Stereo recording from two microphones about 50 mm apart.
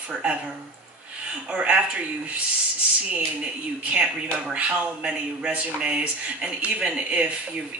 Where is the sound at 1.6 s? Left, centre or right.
Right.